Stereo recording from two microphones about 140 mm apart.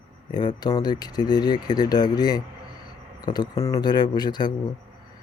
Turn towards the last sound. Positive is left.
turn(degrees=30)  # may be behind; listen again after turning